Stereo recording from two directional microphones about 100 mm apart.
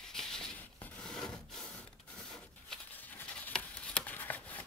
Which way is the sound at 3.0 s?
20° left (ahead or behind).